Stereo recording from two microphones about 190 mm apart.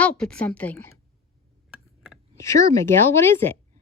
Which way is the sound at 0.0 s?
5° left (ahead or behind).